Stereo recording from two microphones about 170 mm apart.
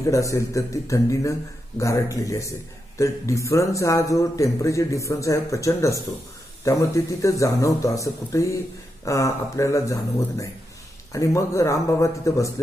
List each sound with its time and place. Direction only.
0.0 s a man's voice: 20° left (ahead or behind)